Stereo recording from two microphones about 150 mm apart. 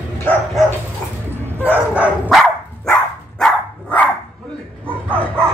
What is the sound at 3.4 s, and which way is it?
Dog, 10° left (ahead or behind).